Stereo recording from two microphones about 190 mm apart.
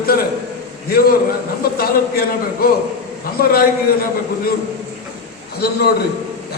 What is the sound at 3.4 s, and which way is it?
Speech, 50° left (ahead or behind).